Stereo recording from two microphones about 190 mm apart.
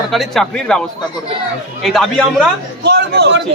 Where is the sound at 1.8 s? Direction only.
Centre (ahead or behind).